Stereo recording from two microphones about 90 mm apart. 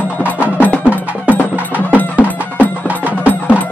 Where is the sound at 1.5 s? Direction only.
20° right (ahead or behind).